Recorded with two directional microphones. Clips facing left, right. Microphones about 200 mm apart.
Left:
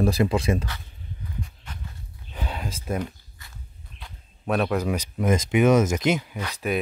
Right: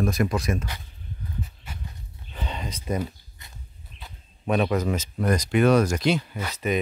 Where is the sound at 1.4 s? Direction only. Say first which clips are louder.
Even; 10° right (ahead or behind).